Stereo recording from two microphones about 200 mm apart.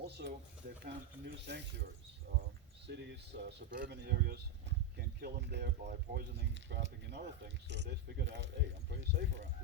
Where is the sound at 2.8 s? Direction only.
60° right (ahead or behind).